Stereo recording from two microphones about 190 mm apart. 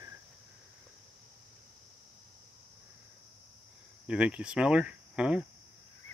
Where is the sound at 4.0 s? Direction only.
5° right (ahead or behind).